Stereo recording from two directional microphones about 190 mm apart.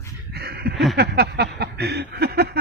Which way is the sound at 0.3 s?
55° right (ahead or behind).